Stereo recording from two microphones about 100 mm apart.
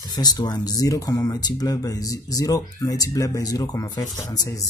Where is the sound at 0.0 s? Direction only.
45° left (ahead or behind).